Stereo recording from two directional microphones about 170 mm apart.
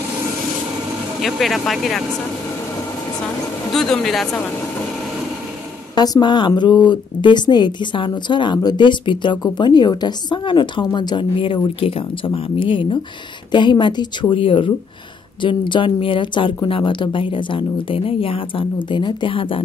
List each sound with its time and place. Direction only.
1.2 s speech: centre (ahead or behind)
3.7 s speech: centre (ahead or behind)
5.9 s speech: 25° left (ahead or behind)